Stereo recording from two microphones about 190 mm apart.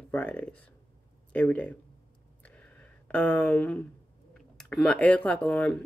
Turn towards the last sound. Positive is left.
turn(degrees=5)  # may be behind; listen again after turning